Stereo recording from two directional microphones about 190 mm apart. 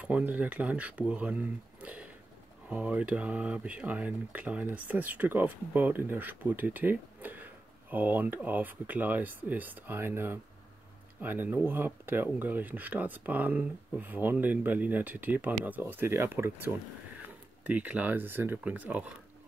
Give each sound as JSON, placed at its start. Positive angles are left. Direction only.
{"t": 0.0, "sound": "speech", "side_deg": -10}